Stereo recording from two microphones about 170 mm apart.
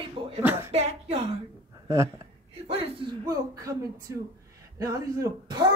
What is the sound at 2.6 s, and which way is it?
Speech, 35° right (ahead or behind).